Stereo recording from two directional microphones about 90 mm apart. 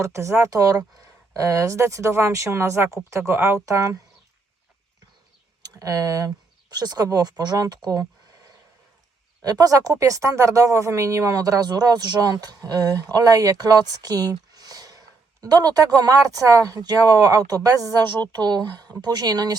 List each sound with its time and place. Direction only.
0.0 s speech: 30° right (ahead or behind)
5.6 s speech: 40° right (ahead or behind)
9.4 s speech: 45° right (ahead or behind)